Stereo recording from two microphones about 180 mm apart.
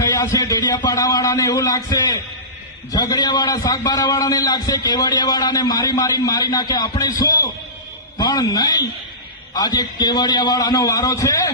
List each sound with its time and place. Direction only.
0.1 s a man's voice: 20° left (ahead or behind)